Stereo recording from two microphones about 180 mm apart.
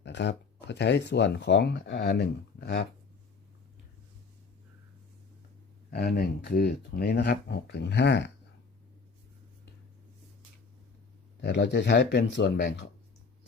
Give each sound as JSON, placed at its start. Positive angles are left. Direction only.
{"t": 0.0, "sound": "speech", "side_deg": 75}
{"t": 5.9, "sound": "speech", "side_deg": 60}
{"t": 11.4, "sound": "speech", "side_deg": 70}